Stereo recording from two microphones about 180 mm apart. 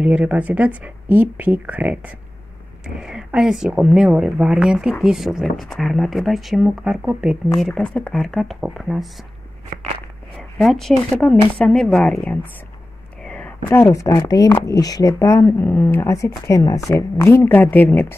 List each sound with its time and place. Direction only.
0.0 s speech: 5° right (ahead or behind)
10.3 s speech: centre (ahead or behind)